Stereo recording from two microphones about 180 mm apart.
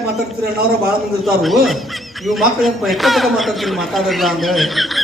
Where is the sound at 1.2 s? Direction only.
Centre (ahead or behind).